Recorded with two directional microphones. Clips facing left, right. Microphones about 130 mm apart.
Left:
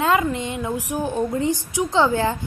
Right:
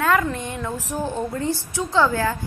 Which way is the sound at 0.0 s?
20° left (ahead or behind).